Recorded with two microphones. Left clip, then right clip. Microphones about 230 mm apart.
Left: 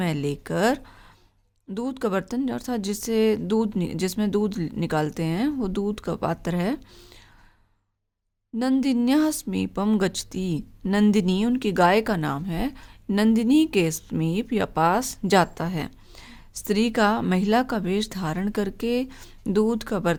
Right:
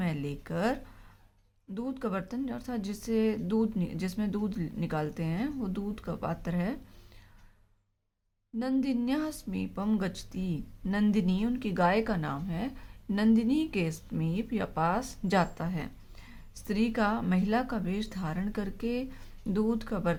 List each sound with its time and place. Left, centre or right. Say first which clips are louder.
0.0 s a woman's voice: left 9 dB; left
8.5 s a woman's voice: left 8 dB; left